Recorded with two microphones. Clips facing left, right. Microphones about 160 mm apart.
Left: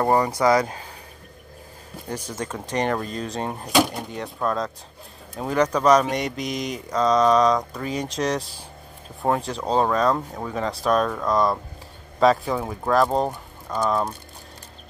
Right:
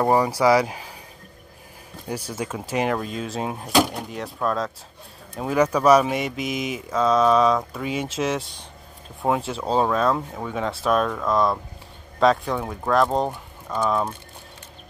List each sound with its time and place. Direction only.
0.0 s speech: 10° right (ahead or behind)
2.0 s speech: 10° right (ahead or behind)